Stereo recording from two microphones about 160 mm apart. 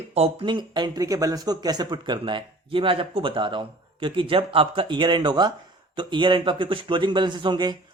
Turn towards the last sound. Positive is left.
turn(degrees=-30)  # may be behind; listen again after turning